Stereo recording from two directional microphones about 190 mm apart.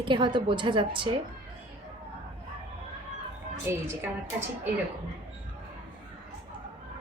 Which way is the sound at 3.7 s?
15° right (ahead or behind).